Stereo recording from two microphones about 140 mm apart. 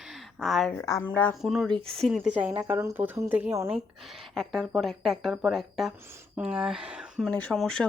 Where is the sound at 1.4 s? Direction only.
Centre (ahead or behind).